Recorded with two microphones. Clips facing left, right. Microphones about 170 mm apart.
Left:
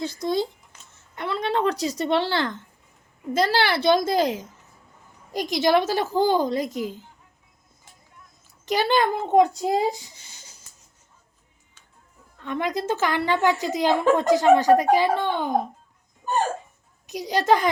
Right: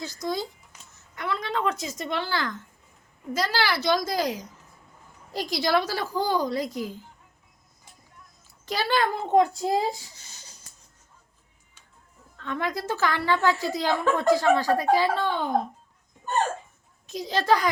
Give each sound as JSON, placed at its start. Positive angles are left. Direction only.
{"t": 0.0, "sound": "a woman's voice", "side_deg": 30}
{"t": 8.6, "sound": "a woman's voice", "side_deg": 20}
{"t": 12.4, "sound": "a woman's voice", "side_deg": 15}
{"t": 17.1, "sound": "a woman's voice", "side_deg": 15}